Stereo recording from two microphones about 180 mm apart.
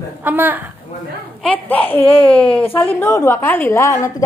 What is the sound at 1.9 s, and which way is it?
Speech, 30° left (ahead or behind).